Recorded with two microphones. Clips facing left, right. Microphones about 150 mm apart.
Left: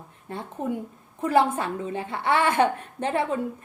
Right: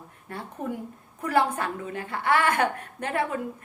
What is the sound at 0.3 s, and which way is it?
A woman's voice, 20° left (ahead or behind).